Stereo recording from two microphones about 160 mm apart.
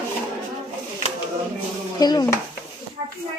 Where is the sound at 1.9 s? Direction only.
25° left (ahead or behind).